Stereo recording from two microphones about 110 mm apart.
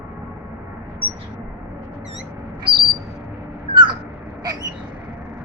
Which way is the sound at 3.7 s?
45° right (ahead or behind).